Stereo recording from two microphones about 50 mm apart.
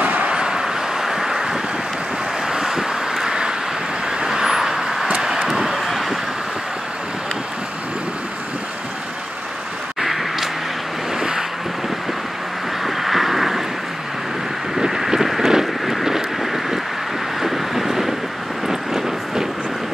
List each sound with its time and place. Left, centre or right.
0.0 s a sound: right
0.3 s vehicle: centre
9.9 s vehicle: centre
11.1 s boat: centre
12.8 s vehicle: centre
14.8 s vehicle: centre